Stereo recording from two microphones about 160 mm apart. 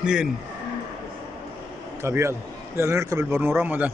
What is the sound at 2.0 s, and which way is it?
A man's voice, 15° right (ahead or behind).